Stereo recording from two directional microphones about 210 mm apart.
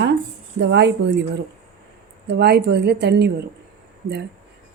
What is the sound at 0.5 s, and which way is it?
Speech, 55° right (ahead or behind).